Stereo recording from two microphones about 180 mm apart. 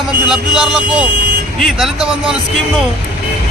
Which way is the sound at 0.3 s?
5° right (ahead or behind).